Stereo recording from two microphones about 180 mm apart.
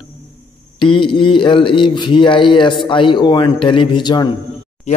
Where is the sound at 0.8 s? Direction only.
30° left (ahead or behind).